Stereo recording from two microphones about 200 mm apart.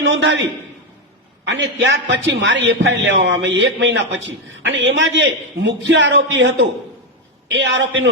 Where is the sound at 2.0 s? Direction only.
65° right (ahead or behind).